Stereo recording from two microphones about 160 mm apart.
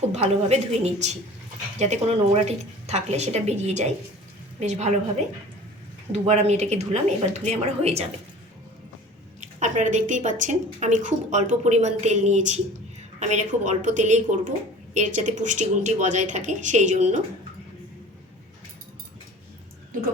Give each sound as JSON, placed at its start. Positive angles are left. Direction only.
{"t": 0.1, "sound": "a woman's voice", "side_deg": -40}
{"t": 6.1, "sound": "a woman's voice", "side_deg": -45}
{"t": 9.4, "sound": "a woman's voice", "side_deg": -50}